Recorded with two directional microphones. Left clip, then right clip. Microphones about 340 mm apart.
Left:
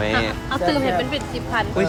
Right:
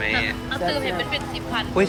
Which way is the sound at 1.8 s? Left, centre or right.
Centre.